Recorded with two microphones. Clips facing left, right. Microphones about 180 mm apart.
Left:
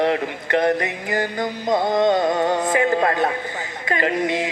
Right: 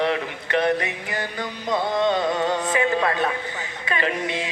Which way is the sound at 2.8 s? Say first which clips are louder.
Left 3 dB; 40° left (ahead or behind).